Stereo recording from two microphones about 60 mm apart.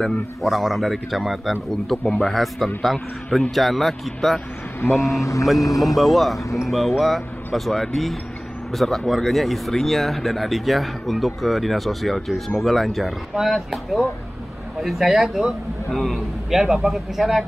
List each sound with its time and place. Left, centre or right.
0.4 s speech: centre
4.9 s speech: left
5.8 s speech: centre